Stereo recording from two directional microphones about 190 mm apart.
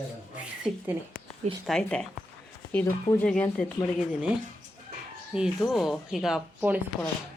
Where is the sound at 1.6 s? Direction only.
5° left (ahead or behind).